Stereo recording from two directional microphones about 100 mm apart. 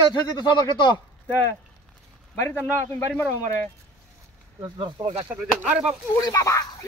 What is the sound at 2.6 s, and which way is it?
Speech, 15° left (ahead or behind).